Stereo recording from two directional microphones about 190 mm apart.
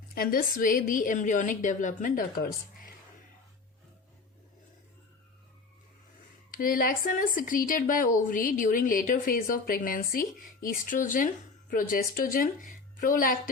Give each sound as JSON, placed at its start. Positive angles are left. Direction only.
{"t": 0.1, "sound": "speech", "side_deg": 50}
{"t": 6.5, "sound": "speech", "side_deg": 45}